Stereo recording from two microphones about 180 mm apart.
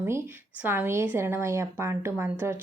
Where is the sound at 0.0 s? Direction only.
10° right (ahead or behind).